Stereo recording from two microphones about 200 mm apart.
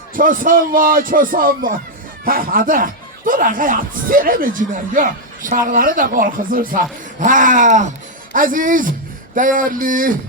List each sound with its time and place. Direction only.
0.1 s speech: 45° right (ahead or behind)